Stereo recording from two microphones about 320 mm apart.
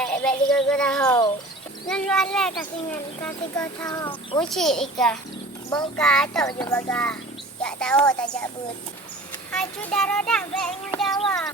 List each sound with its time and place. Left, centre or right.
0.0 s a child's voice: centre
9.5 s a child's voice: centre